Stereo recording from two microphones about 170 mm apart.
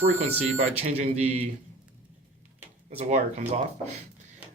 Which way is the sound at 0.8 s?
40° right (ahead or behind).